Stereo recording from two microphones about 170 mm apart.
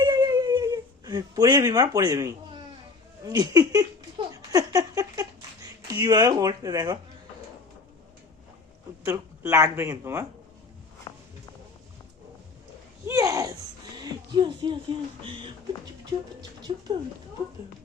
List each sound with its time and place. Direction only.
0.0 s whimper: 25° right (ahead or behind)
3.2 s speech: 20° right (ahead or behind)
9.0 s speech: 15° right (ahead or behind)
11.1 s walk: 25° left (ahead or behind)
13.1 s a sound: 20° right (ahead or behind)
16.4 s speech: 25° right (ahead or behind)